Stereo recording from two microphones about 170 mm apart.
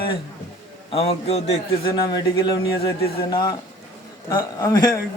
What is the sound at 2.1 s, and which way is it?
Speech, 25° left (ahead or behind).